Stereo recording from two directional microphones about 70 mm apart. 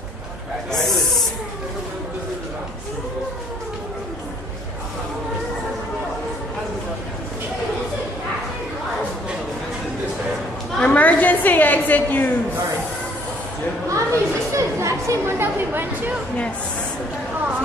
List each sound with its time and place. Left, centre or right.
0.7 s snake: centre
10.8 s a sound: left
13.8 s chatter: right